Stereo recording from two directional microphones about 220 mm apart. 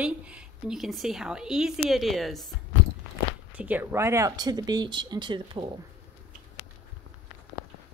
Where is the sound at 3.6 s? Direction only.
10° right (ahead or behind).